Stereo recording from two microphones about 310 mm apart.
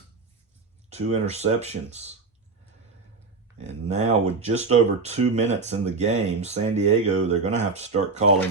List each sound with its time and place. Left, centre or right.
0.9 s speech: right
3.6 s speech: right